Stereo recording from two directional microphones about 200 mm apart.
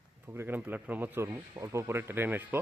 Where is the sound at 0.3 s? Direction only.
10° right (ahead or behind).